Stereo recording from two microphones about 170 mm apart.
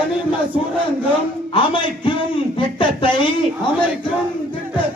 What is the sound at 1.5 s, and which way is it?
Speech, 30° left (ahead or behind).